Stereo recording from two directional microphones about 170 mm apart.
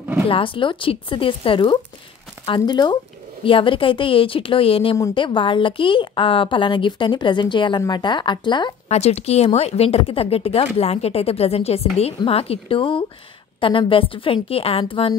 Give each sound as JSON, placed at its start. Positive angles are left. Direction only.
{"t": 0.3, "sound": "a woman's voice", "side_deg": 30}